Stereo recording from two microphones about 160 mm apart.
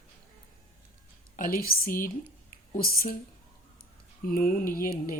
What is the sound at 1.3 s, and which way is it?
Speech, 60° left (ahead or behind).